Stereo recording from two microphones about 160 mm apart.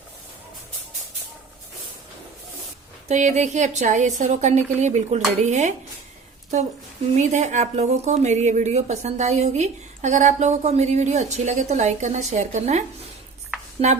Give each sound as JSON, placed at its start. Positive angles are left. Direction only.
{"t": 3.1, "sound": "a woman's voice", "side_deg": -50}
{"t": 7.2, "sound": "a woman's voice", "side_deg": -45}
{"t": 13.8, "sound": "a woman's voice", "side_deg": -45}